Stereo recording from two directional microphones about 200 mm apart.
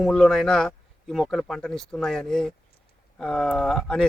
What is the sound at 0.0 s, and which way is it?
Speech, 5° left (ahead or behind).